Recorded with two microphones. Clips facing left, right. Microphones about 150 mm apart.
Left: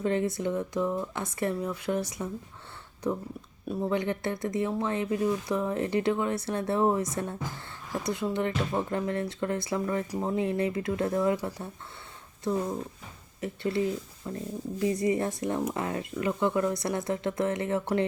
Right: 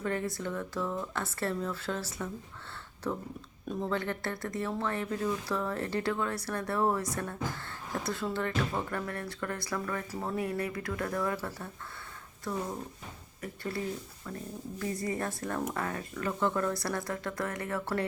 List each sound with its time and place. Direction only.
0.0 s speech: 20° left (ahead or behind)
13.4 s speech: 25° left (ahead or behind)